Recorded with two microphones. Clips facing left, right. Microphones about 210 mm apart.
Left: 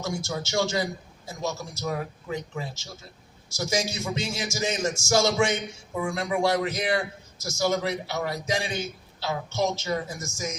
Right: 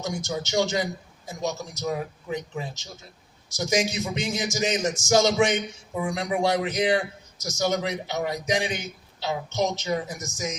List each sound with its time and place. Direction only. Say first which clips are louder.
0.0 s a man's voice: right 1 dB; 20° right (ahead or behind)